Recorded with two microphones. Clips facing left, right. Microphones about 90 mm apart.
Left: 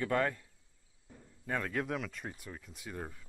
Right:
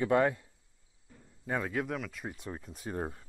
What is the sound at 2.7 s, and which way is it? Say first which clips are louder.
Speech: right 7 dB; 40° right (ahead or behind).